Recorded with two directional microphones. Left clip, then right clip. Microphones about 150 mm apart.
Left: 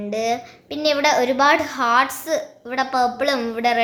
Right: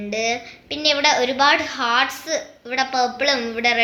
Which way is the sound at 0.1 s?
35° left (ahead or behind).